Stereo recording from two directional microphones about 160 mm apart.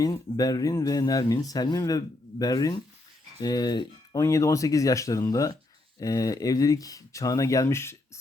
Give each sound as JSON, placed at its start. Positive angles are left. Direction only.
{"t": 0.0, "sound": "speech", "side_deg": 25}